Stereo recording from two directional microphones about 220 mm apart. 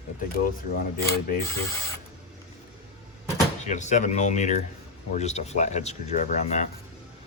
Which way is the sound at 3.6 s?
35° left (ahead or behind).